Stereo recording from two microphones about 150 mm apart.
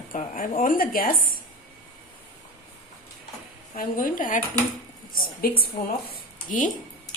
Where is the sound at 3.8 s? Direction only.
65° left (ahead or behind).